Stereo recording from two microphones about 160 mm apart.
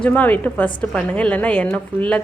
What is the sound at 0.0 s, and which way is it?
A woman's voice, 10° left (ahead or behind).